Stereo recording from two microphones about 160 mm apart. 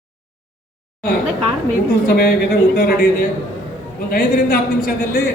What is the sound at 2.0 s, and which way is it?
Speech, 70° left (ahead or behind).